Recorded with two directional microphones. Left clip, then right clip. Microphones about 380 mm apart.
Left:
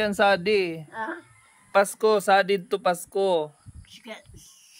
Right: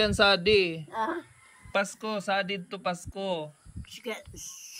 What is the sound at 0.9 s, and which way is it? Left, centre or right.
Speech, right.